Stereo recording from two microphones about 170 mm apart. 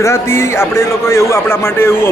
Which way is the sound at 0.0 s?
15° left (ahead or behind).